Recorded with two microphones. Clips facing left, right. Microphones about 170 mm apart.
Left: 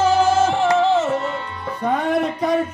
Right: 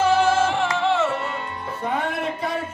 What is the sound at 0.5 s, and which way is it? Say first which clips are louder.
Music: left 5 dB; 40° left (ahead or behind).